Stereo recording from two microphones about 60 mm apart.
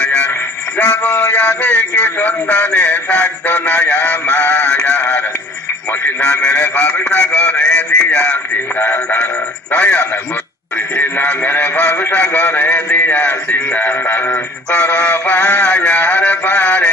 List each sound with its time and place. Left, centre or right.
0.0 s music: centre
0.7 s synthetic singing: centre
6.2 s a sound: centre
9.2 s synthetic singing: left
11.4 s a sound: left
12.1 s synthetic singing: left